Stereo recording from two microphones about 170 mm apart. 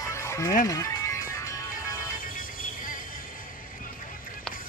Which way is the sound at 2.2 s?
55° left (ahead or behind).